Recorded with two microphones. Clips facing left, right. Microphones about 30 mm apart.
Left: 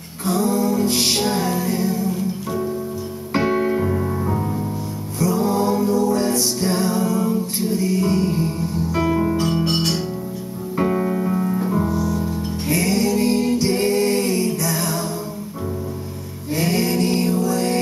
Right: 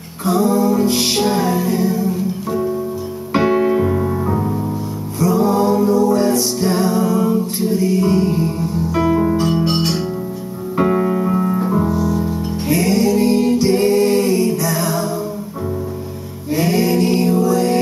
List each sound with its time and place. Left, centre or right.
0.2 s music: centre
7.6 s music: centre
9.7 s music: right; by 15.0 s centre
16.6 s music: centre